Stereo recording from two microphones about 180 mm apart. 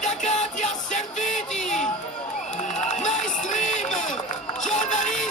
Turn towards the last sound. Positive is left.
turn(degrees=45)  # may be behind; listen again after turning